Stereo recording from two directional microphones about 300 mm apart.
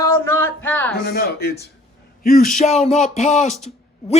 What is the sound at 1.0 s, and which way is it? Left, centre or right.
Speech, left.